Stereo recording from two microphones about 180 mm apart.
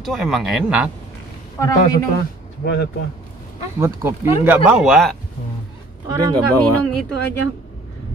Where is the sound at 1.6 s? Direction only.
15° left (ahead or behind).